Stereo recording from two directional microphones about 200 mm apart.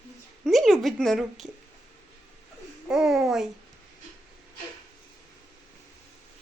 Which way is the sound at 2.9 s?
Centre (ahead or behind).